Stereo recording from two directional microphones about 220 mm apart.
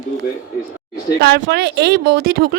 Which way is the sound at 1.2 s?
50° right (ahead or behind).